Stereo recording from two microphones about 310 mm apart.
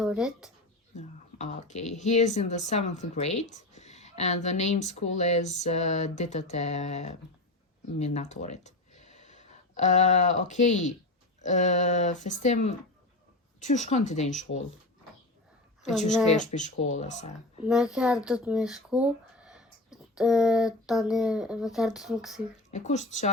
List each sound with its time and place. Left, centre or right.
0.0 s speech: centre
0.9 s speech: left
16.3 s speech: left
17.7 s speech: centre
22.7 s speech: left